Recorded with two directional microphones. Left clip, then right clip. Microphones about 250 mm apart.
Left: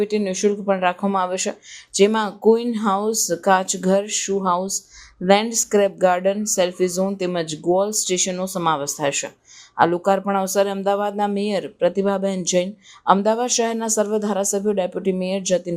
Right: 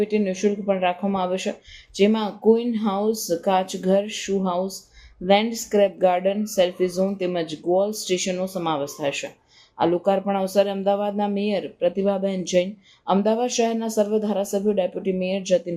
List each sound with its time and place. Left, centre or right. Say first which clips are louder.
0.0 s speech: left 2 dB; centre